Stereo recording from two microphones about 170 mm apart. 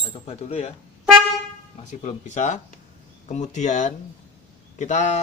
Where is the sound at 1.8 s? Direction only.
40° left (ahead or behind).